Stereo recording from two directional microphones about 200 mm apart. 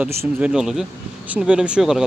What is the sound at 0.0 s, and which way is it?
Speech, 5° right (ahead or behind).